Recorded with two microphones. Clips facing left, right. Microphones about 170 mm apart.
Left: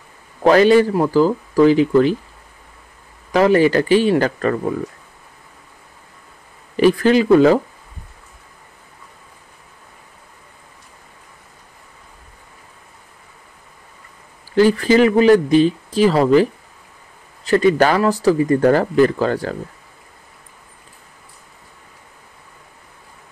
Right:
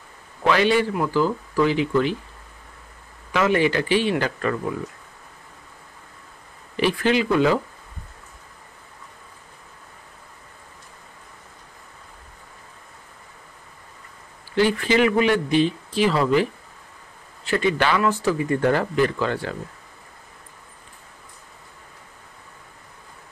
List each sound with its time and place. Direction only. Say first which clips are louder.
0.4 s speech: left 8 dB; 40° left (ahead or behind)
3.3 s speech: left 7 dB; 40° left (ahead or behind)
6.8 s speech: left 7 dB; 40° left (ahead or behind)
14.5 s speech: left 6 dB; 40° left (ahead or behind)
17.5 s speech: left 7 dB; 40° left (ahead or behind)